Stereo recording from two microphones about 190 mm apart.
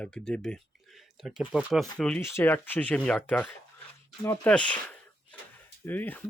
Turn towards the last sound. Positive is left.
turn(degrees=10)  # may be behind; listen again after turning